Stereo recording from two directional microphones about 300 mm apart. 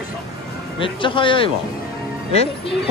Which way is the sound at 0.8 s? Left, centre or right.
Centre.